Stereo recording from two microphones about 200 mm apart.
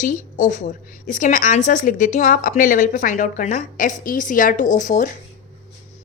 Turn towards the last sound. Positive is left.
turn(degrees=40)  # may be behind; listen again after turning